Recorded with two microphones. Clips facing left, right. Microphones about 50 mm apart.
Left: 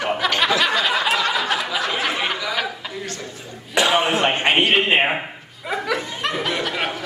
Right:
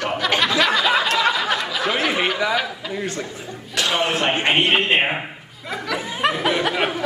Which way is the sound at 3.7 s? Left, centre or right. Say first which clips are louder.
Left 3 dB; centre.